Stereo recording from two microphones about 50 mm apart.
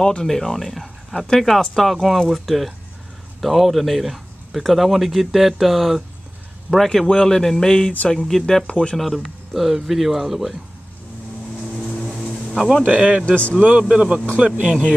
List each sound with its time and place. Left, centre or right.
0.0 s speech: centre
8.9 s speech: centre
12.5 s speech: centre
13.2 s a man's voice: left
13.6 s a man's voice: right